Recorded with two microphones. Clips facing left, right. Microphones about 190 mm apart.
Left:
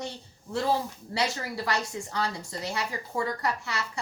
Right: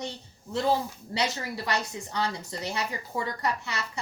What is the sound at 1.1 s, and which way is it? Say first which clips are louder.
A woman's voice: even; 20° right (ahead or behind).